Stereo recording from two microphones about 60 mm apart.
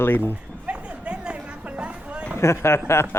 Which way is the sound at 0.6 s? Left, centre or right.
Centre.